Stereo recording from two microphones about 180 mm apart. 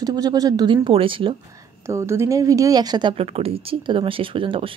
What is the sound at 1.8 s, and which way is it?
A woman's voice, 15° right (ahead or behind).